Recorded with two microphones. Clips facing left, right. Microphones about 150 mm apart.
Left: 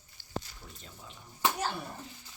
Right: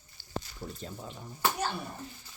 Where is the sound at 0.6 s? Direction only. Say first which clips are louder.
Right 10 dB; 30° right (ahead or behind).